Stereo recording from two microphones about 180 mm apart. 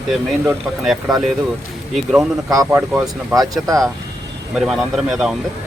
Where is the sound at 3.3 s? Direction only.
20° right (ahead or behind).